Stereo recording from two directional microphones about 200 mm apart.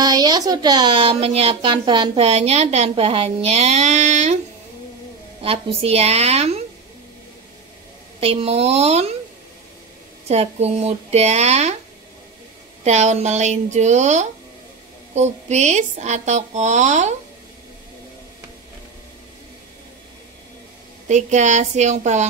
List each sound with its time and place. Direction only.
0.0 s speech: 20° right (ahead or behind); by 4.4 s 35° right (ahead or behind)
5.4 s speech: 30° right (ahead or behind)
8.2 s speech: 30° right (ahead or behind)
10.2 s speech: 30° right (ahead or behind)
12.8 s speech: 35° right (ahead or behind)
21.1 s speech: 35° right (ahead or behind)